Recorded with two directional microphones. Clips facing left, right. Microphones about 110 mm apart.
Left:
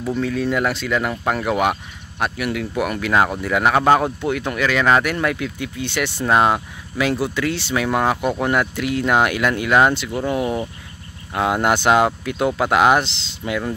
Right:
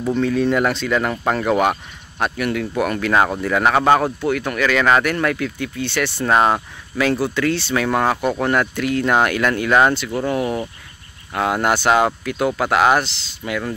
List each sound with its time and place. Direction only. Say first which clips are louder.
0.1 s speech: right 3 dB; 5° left (ahead or behind)
4.2 s speech: right 1 dB; 20° left (ahead or behind)